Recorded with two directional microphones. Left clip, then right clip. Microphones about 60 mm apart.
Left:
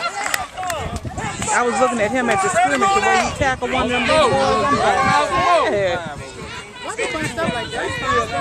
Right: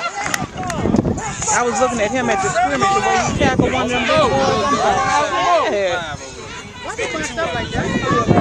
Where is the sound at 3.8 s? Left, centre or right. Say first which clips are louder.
Left 2 dB; centre.